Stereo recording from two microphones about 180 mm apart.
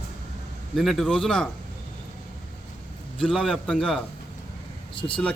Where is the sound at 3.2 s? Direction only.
Centre (ahead or behind).